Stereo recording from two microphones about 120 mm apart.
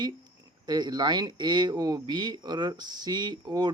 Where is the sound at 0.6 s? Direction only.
35° right (ahead or behind).